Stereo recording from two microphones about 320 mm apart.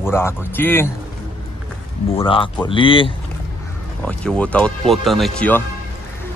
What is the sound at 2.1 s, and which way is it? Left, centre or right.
Speech, centre.